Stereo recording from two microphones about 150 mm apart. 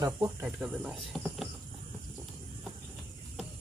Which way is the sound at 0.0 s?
20° right (ahead or behind).